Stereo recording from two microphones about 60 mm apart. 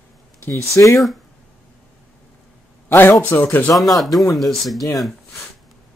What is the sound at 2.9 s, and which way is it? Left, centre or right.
Speech, left.